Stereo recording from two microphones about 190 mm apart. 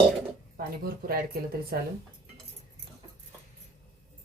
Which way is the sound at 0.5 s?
50° right (ahead or behind).